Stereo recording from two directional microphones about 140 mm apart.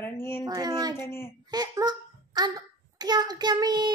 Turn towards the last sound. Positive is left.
turn(degrees=-30)  # may be behind; listen again after turning